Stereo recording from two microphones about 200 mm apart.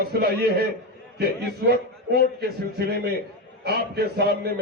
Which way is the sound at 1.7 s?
50° right (ahead or behind).